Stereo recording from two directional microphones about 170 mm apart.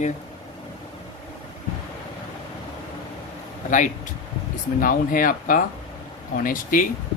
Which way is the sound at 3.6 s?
50° left (ahead or behind).